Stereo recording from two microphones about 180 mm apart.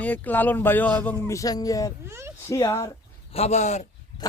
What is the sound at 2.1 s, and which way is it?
Speech, 15° right (ahead or behind).